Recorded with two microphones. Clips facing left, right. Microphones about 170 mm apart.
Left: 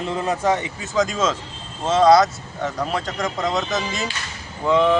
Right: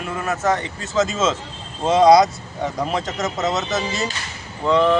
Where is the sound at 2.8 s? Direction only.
5° right (ahead or behind).